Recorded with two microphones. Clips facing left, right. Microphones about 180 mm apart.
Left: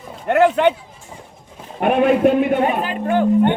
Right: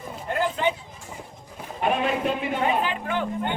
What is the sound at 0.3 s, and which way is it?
Speech, 70° left (ahead or behind).